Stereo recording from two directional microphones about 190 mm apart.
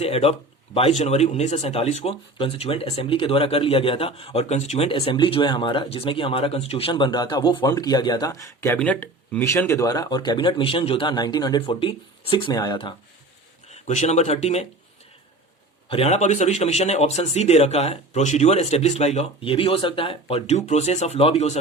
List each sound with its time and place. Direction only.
0.0 s speech: 30° left (ahead or behind)
13.7 s speech: 35° left (ahead or behind)
15.9 s a man's voice: 35° left (ahead or behind)